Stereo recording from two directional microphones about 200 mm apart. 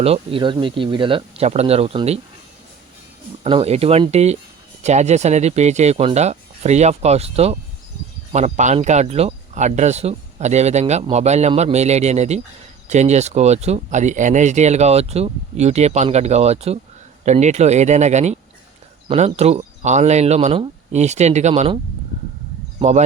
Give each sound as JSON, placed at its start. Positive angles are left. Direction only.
{"t": 0.0, "sound": "speech", "side_deg": -30}
{"t": 3.4, "sound": "speech", "side_deg": -30}
{"t": 22.8, "sound": "speech", "side_deg": -35}